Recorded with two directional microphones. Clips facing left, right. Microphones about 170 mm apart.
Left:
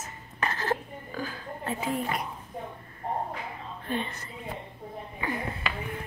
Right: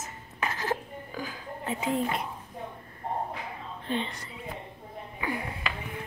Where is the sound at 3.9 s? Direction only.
20° right (ahead or behind).